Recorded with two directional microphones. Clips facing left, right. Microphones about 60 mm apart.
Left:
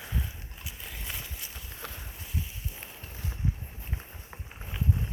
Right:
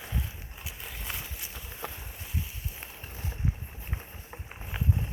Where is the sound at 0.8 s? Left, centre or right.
Centre.